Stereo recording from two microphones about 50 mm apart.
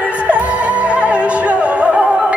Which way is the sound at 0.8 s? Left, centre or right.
Right.